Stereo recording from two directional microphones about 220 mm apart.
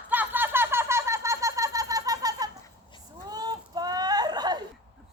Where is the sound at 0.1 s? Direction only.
10° right (ahead or behind).